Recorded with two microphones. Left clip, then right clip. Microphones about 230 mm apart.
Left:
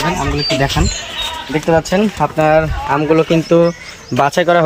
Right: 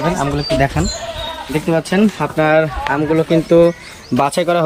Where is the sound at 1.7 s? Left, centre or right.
Left.